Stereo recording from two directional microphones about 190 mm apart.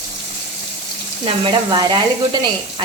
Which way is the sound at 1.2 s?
25° right (ahead or behind).